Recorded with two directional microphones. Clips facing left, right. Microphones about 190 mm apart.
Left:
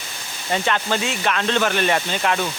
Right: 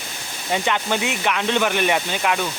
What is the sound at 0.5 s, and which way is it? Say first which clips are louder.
Speech: even; 15° right (ahead or behind).